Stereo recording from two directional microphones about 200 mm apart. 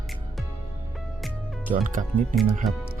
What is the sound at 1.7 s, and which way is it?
Speech, 40° right (ahead or behind).